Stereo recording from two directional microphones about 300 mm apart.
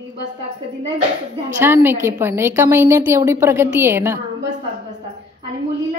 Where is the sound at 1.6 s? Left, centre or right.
Centre.